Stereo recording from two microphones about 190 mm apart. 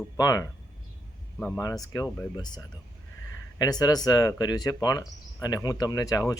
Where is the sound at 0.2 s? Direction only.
20° left (ahead or behind).